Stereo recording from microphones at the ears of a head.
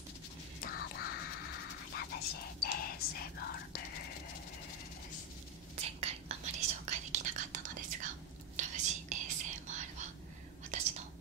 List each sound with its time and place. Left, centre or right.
0.6 s whispering: left
5.8 s whispering: right